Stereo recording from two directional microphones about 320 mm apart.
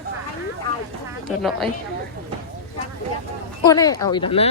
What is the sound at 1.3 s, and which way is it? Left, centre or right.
Speech, centre.